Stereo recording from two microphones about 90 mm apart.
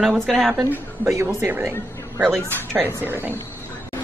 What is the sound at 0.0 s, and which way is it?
Speech, centre (ahead or behind).